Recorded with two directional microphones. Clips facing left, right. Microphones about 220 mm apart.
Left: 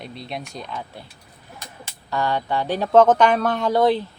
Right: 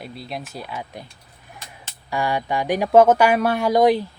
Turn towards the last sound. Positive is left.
turn(degrees=-10)  # may be behind; listen again after turning